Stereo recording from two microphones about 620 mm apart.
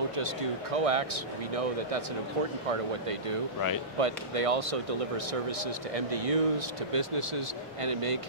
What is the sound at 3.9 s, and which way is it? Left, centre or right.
Speech, right.